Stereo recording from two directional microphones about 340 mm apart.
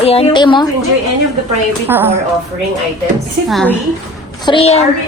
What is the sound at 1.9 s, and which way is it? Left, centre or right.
Speech, centre.